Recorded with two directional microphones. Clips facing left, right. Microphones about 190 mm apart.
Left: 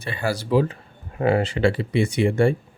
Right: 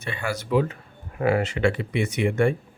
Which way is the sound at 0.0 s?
35° left (ahead or behind).